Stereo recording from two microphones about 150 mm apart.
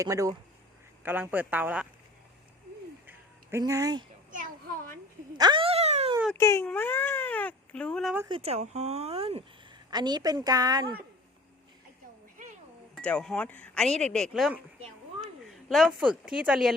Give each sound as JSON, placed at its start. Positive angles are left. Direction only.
{"t": 0.0, "sound": "speech", "side_deg": -20}
{"t": 3.6, "sound": "speech", "side_deg": -25}
{"t": 4.3, "sound": "children playing", "side_deg": -65}
{"t": 5.4, "sound": "a sound", "side_deg": -30}
{"t": 6.3, "sound": "speech", "side_deg": 20}
{"t": 8.3, "sound": "speech", "side_deg": -45}
{"t": 9.9, "sound": "speech", "side_deg": -30}
{"t": 12.4, "sound": "a sound", "side_deg": -55}
{"t": 13.0, "sound": "speech", "side_deg": 5}
{"t": 15.2, "sound": "a sound", "side_deg": 0}
{"t": 16.0, "sound": "speech", "side_deg": -5}